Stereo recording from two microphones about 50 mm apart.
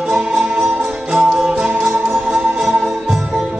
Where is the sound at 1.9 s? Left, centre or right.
Right.